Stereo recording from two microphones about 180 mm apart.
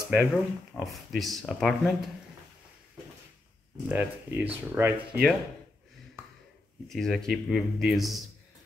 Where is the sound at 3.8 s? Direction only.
10° right (ahead or behind).